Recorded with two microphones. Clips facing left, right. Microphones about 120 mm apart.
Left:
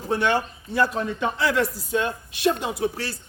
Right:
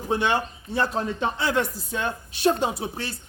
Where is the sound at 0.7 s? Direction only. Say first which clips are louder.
Left 2 dB; 25° right (ahead or behind).